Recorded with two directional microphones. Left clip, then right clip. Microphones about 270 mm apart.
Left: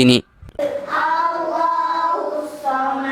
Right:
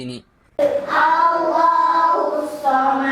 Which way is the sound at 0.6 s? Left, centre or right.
Centre.